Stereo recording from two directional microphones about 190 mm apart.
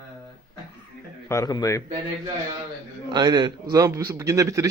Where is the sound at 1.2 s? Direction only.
20° left (ahead or behind).